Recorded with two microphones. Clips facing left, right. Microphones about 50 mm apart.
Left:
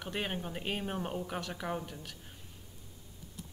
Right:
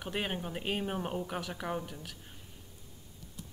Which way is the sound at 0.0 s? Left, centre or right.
Centre.